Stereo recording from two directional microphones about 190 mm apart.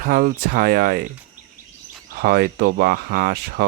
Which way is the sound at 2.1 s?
55° right (ahead or behind).